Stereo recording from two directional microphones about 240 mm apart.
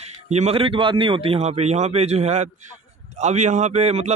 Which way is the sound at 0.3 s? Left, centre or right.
Right.